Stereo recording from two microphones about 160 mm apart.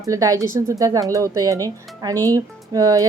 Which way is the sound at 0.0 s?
20° right (ahead or behind).